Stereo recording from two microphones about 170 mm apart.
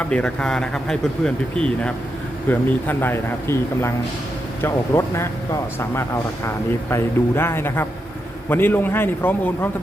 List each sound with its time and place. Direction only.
0.0 s speech: 5° left (ahead or behind)